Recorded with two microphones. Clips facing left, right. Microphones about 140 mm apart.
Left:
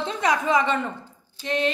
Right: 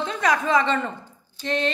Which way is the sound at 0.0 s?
20° left (ahead or behind).